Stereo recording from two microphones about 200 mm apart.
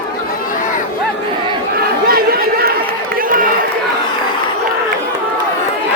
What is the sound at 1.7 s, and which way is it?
Chatter, 50° right (ahead or behind).